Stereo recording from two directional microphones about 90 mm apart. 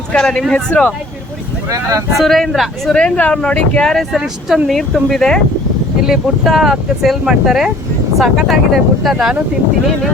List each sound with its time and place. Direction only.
0.1 s speech: 10° left (ahead or behind)
1.7 s speech: 35° right (ahead or behind)
2.1 s speech: centre (ahead or behind)